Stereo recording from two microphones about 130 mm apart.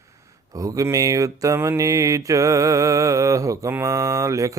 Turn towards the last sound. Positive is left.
turn(degrees=-25)  # may be behind; listen again after turning